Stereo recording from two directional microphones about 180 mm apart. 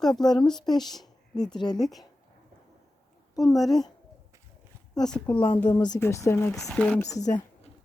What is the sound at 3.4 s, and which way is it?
Speech, centre (ahead or behind).